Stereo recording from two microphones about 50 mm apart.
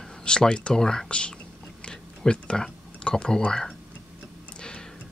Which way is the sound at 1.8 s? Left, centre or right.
Centre.